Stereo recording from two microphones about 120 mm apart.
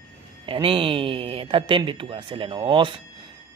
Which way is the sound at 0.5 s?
45° right (ahead or behind).